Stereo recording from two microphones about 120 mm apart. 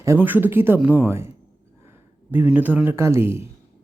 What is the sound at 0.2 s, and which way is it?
Speech, 15° right (ahead or behind).